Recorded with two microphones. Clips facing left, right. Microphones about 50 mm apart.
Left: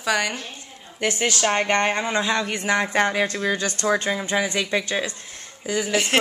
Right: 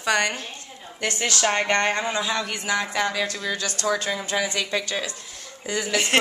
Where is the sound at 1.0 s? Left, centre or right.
Centre.